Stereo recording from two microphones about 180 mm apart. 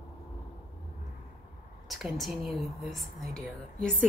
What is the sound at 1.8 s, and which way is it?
Speech, centre (ahead or behind).